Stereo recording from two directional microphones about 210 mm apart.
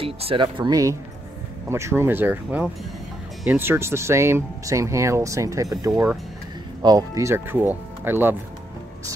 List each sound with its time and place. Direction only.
0.0 s speech: 25° right (ahead or behind); by 8.4 s 10° right (ahead or behind)